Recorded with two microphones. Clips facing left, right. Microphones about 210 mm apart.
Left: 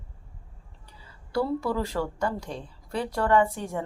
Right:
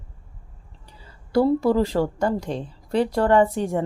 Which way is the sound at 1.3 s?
35° right (ahead or behind).